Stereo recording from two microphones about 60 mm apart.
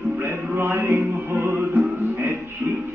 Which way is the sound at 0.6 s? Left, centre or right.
Right.